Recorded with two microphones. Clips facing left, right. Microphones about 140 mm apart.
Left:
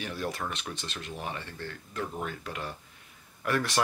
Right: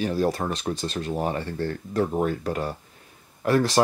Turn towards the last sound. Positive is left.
turn(degrees=-30)  # may be behind; listen again after turning